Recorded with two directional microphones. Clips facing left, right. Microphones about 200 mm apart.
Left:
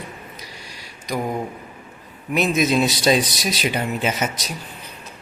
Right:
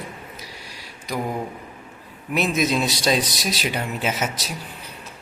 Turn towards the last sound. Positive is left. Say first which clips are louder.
# left 2 dB
turn(degrees=0)  # may be behind; listen again after turning